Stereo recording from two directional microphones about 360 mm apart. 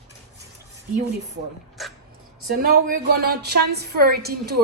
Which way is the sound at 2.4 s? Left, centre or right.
Right.